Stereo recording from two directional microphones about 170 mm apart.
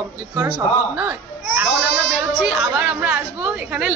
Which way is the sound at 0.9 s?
10° right (ahead or behind).